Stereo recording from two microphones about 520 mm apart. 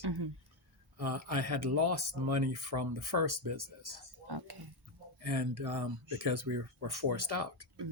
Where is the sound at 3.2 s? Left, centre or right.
Right.